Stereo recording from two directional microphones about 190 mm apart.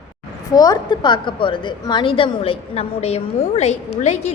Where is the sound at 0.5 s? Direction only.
20° left (ahead or behind).